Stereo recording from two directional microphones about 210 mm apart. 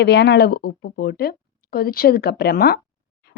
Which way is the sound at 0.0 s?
55° left (ahead or behind).